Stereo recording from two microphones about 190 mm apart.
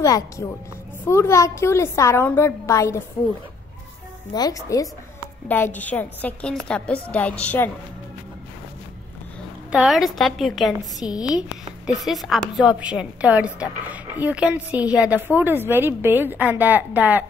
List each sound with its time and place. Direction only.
0.0 s a woman's voice: 15° left (ahead or behind)
4.3 s a woman's voice: 20° left (ahead or behind)
9.7 s a woman's voice: centre (ahead or behind)
11.0 s a woman's voice: 20° left (ahead or behind)
11.8 s a woman's voice: centre (ahead or behind)